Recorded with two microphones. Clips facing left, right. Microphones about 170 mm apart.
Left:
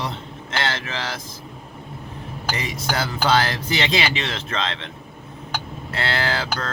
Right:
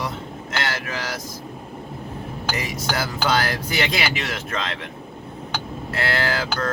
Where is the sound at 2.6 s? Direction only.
25° left (ahead or behind).